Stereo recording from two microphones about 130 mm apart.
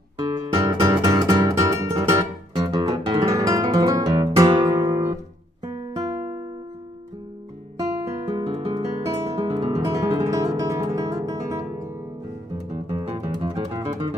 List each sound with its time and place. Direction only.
0.2 s music: 25° right (ahead or behind)
2.5 s guitar: 30° right (ahead or behind)
5.9 s music: 25° right (ahead or behind)
7.7 s guitar: 25° right (ahead or behind)
9.4 s guitar: 50° right (ahead or behind)
9.9 s music: 25° right (ahead or behind)
12.7 s music: 55° right (ahead or behind)